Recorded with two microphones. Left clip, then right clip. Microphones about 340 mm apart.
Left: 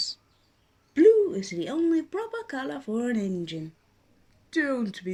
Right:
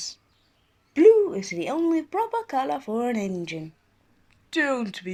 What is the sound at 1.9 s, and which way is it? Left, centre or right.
Speech, centre.